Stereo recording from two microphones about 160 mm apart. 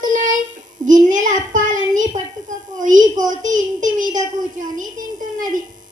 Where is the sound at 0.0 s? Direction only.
55° right (ahead or behind).